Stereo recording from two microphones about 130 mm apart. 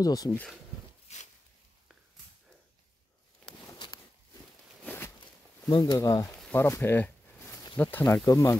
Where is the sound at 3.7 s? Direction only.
35° left (ahead or behind).